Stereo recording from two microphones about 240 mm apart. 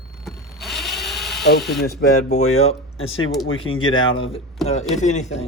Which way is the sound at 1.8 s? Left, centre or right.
Left.